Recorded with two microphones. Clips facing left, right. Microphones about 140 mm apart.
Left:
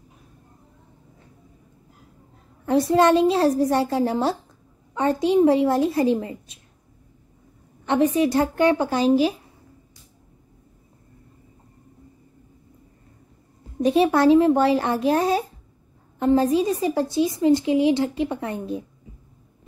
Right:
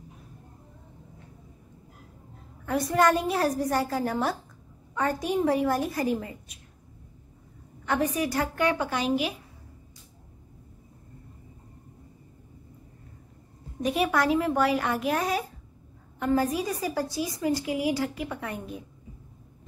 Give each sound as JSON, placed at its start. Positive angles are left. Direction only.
{"t": 2.6, "sound": "a woman's voice", "side_deg": 25}
{"t": 7.8, "sound": "a woman's voice", "side_deg": 25}
{"t": 13.8, "sound": "a woman's voice", "side_deg": 30}